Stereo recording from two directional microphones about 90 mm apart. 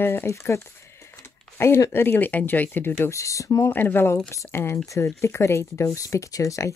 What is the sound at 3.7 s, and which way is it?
Speech, 20° left (ahead or behind).